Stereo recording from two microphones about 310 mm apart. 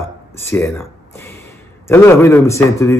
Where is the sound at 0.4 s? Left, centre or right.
Centre.